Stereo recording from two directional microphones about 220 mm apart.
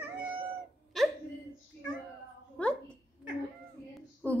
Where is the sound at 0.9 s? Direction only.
Centre (ahead or behind).